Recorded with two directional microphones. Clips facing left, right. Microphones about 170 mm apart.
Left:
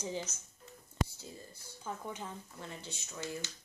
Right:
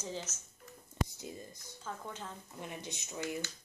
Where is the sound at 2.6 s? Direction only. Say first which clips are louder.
Right 2 dB; 15° right (ahead or behind).